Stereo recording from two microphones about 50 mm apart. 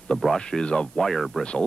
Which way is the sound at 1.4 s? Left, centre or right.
Centre.